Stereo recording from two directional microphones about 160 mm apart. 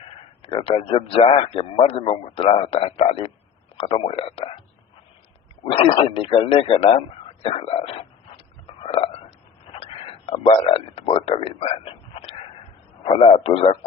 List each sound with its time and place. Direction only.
0.4 s a man's voice: 35° left (ahead or behind)
5.7 s a man's voice: 35° left (ahead or behind)
8.6 s biting: 35° left (ahead or behind)
9.7 s a sound: 35° left (ahead or behind)
13.0 s a man's voice: 40° left (ahead or behind)